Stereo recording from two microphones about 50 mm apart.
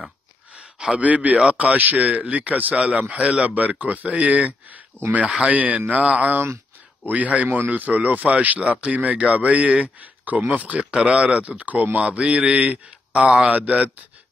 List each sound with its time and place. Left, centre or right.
0.6 s a sound: centre
1.0 s a man's voice: right
4.9 s speech: left
5.4 s a man's voice: right
7.4 s speech: right
13.5 s a man's voice: right